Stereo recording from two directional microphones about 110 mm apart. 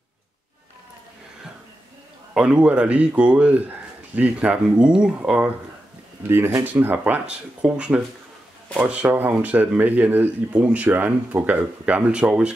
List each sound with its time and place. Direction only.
2.3 s speech: 10° right (ahead or behind)
6.2 s speech: 20° right (ahead or behind)